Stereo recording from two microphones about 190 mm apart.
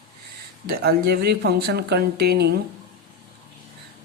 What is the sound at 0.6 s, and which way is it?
Speech, 55° right (ahead or behind).